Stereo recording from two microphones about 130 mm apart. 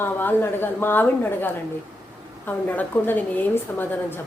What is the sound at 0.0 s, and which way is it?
A woman's voice, 15° left (ahead or behind).